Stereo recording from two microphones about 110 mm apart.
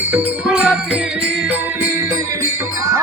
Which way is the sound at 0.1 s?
10° right (ahead or behind).